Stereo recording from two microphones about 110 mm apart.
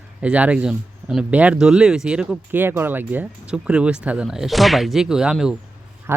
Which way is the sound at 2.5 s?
20° right (ahead or behind).